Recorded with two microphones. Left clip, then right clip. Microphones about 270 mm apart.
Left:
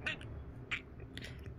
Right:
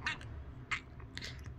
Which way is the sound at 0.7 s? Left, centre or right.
Centre.